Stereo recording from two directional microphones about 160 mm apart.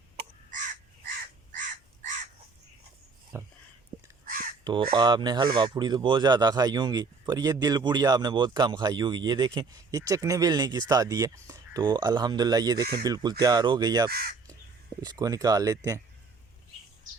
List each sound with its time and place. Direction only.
0.5 s crow: 50° right (ahead or behind)
3.3 s speech: 20° right (ahead or behind)
4.6 s speech: 30° right (ahead or behind)
14.1 s speech: 70° right (ahead or behind)
15.0 s speech: 25° right (ahead or behind)